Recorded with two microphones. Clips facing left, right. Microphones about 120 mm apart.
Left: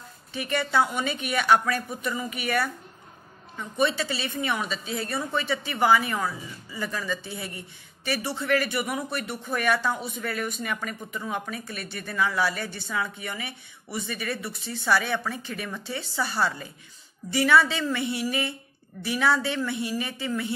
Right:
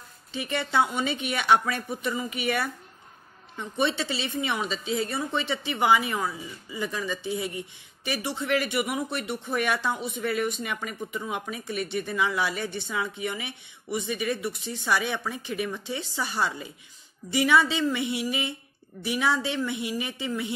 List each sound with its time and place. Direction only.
0.3 s a woman's voice: 20° right (ahead or behind)
17.3 s a sound: 20° right (ahead or behind)
19.0 s a woman's voice: 20° right (ahead or behind)